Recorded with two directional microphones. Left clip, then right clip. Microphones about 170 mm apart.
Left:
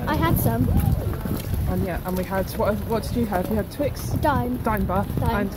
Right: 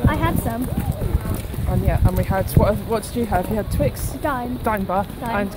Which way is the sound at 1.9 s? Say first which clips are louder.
Right 5 dB; 20° right (ahead or behind).